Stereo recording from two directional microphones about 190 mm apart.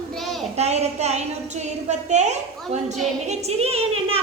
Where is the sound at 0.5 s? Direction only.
35° right (ahead or behind).